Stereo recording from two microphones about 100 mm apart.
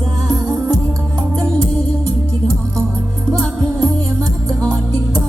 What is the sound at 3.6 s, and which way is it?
Music, 40° right (ahead or behind).